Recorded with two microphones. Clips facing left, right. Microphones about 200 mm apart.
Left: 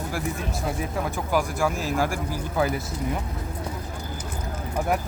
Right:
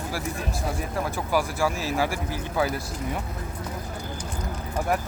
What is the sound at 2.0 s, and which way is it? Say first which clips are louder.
Speech: left 1 dB; 50° left (ahead or behind).